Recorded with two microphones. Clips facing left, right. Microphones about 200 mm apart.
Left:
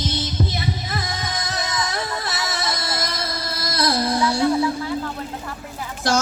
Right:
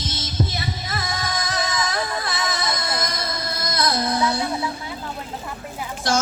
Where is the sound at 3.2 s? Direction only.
30° left (ahead or behind).